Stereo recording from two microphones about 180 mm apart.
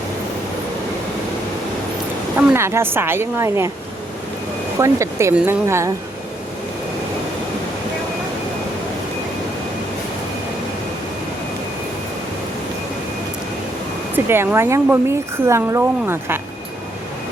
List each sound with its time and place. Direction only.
2.5 s a woman's voice: 15° right (ahead or behind)
4.8 s a woman's voice: 15° right (ahead or behind)
14.3 s a woman's voice: 15° right (ahead or behind)